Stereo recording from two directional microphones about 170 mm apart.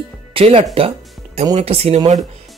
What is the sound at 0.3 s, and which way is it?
Speech, 35° right (ahead or behind).